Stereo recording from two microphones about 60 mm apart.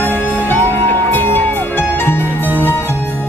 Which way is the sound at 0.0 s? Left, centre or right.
Left.